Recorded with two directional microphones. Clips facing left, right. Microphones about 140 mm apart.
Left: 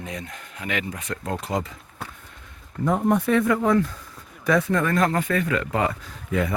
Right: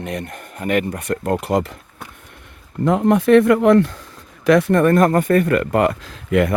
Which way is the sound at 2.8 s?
90° right.